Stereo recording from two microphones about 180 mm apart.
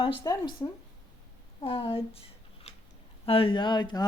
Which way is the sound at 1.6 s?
30° left (ahead or behind).